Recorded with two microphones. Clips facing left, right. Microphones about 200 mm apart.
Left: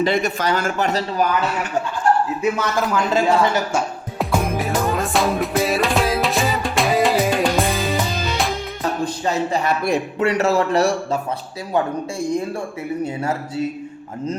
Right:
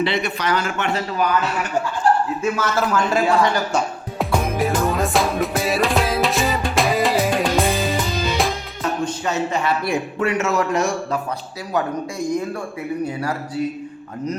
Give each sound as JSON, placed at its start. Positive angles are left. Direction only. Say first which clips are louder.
{"t": 0.0, "sound": "speech", "louder": "left 3 dB", "side_deg": 45}
{"t": 2.0, "sound": "chuckle", "louder": "even", "side_deg": -35}
{"t": 2.4, "sound": "speech", "louder": "left 1 dB", "side_deg": 15}
{"t": 3.7, "sound": "music", "louder": "even", "side_deg": 5}
{"t": 9.0, "sound": "speech", "louder": "left 1 dB", "side_deg": 35}